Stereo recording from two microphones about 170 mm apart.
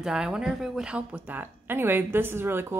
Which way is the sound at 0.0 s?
5° right (ahead or behind).